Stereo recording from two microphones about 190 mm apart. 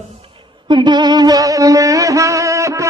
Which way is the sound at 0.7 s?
25° right (ahead or behind).